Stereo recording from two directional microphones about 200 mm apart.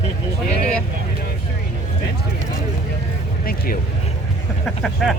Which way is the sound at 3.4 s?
45° left (ahead or behind).